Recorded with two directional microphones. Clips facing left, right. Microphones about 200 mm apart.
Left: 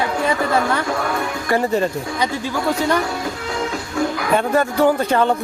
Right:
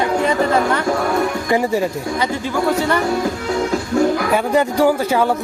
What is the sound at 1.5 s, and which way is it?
Speech, 10° right (ahead or behind).